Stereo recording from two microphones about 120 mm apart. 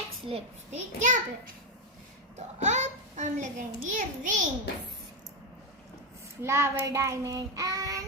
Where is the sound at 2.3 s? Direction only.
75° right (ahead or behind); by 4.4 s 90° right.